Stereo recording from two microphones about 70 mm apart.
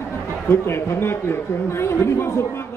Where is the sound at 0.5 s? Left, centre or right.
Left.